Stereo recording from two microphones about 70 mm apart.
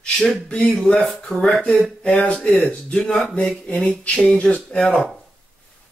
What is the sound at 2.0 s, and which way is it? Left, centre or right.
Speech, centre.